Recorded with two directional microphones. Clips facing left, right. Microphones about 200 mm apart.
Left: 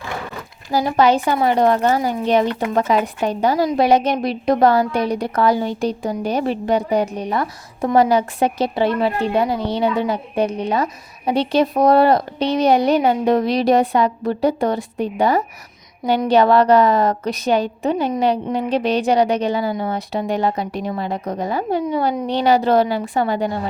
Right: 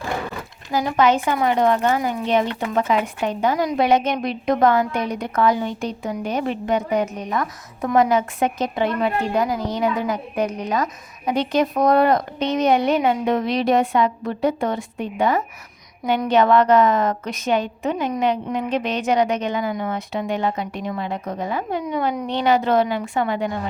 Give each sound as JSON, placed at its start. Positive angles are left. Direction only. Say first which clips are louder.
{"t": 0.7, "sound": "a woman's voice", "louder": "left 2 dB", "side_deg": 35}